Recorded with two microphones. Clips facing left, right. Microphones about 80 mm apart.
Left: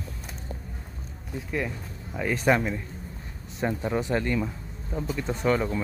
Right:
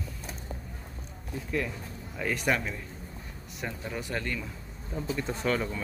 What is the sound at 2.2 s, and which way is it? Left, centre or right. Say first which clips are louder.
Speech: left 5 dB; left.